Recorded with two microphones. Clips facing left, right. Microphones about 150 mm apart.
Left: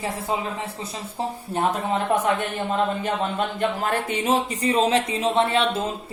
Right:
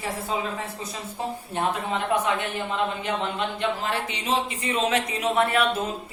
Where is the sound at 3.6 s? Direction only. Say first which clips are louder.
Left 4 dB; 50° left (ahead or behind).